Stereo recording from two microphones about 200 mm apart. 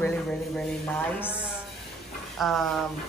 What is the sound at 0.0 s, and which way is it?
A man's voice, 5° left (ahead or behind).